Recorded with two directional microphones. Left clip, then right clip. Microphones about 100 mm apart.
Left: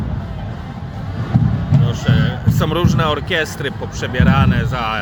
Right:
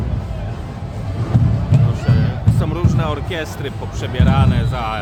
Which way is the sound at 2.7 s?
30° left (ahead or behind).